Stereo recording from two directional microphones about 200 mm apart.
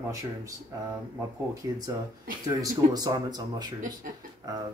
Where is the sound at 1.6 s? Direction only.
20° right (ahead or behind).